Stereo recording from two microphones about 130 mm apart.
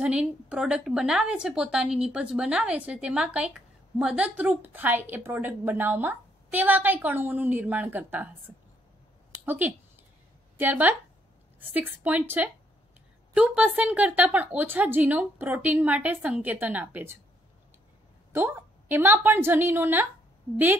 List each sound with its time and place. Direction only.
0.0 s a woman's voice: 10° right (ahead or behind)
9.5 s a woman's voice: 15° right (ahead or behind)
18.3 s a woman's voice: 15° right (ahead or behind)